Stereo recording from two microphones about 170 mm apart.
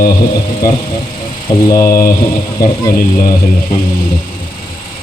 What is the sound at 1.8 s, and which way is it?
Speech, 55° left (ahead or behind).